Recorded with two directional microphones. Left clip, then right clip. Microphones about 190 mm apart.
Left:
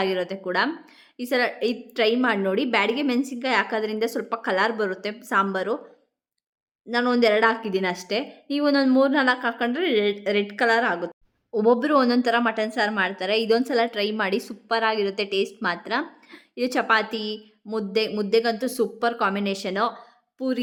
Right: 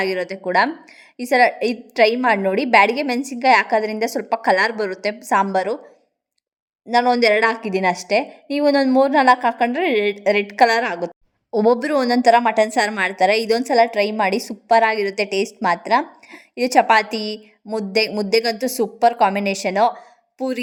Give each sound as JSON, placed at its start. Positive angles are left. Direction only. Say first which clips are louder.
{"t": 0.0, "sound": "a woman's voice", "louder": "right 3 dB", "side_deg": -20}
{"t": 6.8, "sound": "a woman's voice", "louder": "right 6 dB", "side_deg": -20}